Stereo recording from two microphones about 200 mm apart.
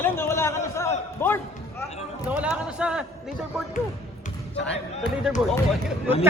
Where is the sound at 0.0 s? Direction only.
10° left (ahead or behind).